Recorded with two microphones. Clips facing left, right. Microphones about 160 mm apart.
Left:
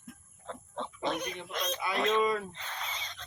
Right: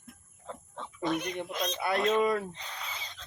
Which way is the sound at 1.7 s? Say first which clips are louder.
Right 6 dB; 60° right (ahead or behind).